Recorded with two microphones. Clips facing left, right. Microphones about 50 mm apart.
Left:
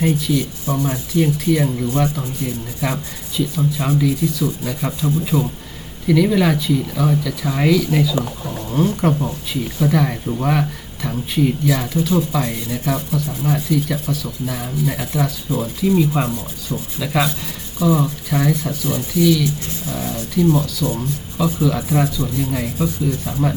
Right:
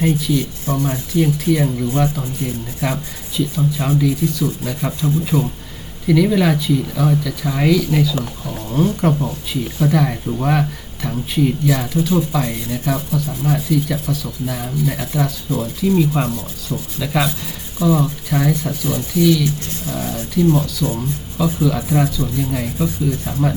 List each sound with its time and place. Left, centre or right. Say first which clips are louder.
0.0 s speech: right 1 dB; centre
0.7 s speech: right 1 dB; centre
1.1 s speech: even; centre
20.8 s speech: even; centre